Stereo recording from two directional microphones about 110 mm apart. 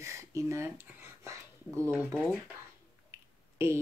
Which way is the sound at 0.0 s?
25° right (ahead or behind).